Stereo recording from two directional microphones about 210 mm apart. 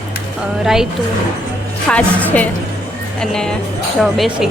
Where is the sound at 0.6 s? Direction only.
Centre (ahead or behind).